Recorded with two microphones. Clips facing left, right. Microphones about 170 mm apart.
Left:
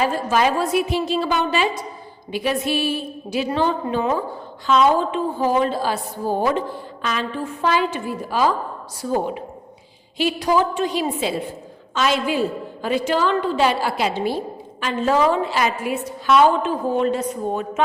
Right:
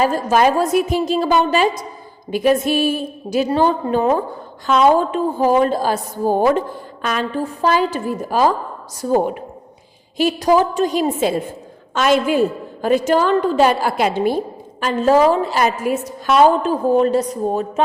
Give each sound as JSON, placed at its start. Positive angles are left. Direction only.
{"t": 0.0, "sound": "a woman's voice", "side_deg": -40}